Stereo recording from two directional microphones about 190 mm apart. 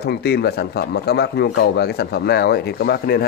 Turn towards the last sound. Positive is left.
turn(degrees=55)  # may be behind; listen again after turning